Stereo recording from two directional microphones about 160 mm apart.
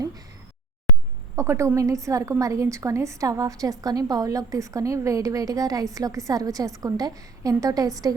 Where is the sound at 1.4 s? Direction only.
20° right (ahead or behind).